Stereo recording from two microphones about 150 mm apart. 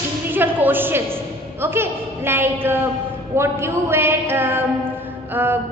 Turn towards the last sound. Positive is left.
turn(degrees=-15)  # may be behind; listen again after turning